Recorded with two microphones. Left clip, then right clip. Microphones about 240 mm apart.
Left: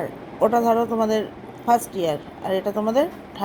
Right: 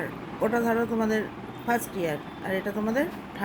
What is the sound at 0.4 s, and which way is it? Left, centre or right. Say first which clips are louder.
A woman's voice: left 7 dB; left.